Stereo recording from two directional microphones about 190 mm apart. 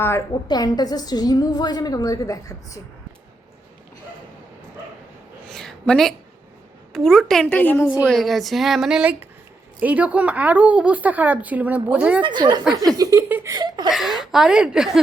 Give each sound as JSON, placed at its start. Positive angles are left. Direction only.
{"t": 0.4, "sound": "a woman's voice", "side_deg": 20}
{"t": 5.5, "sound": "a sound", "side_deg": 0}
{"t": 6.9, "sound": "a woman's voice", "side_deg": 0}
{"t": 12.2, "sound": "a woman's voice", "side_deg": -25}
{"t": 13.9, "sound": "speech", "side_deg": 0}